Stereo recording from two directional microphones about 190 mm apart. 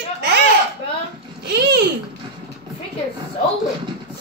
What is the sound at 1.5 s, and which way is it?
Babbling, 60° right (ahead or behind).